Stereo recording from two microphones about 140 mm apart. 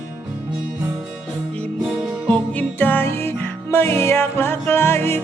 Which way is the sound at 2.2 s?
10° left (ahead or behind).